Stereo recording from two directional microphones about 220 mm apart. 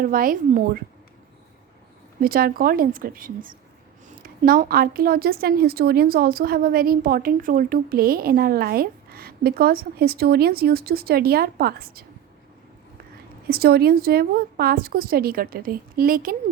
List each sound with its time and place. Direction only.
0.0 s a woman's voice: 40° right (ahead or behind)
2.2 s a woman's voice: 40° right (ahead or behind)
13.5 s a woman's voice: 45° right (ahead or behind)